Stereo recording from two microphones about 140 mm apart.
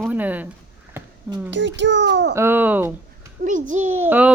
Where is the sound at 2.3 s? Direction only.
15° right (ahead or behind).